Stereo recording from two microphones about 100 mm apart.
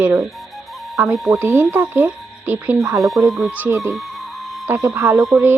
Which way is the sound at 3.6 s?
30° right (ahead or behind).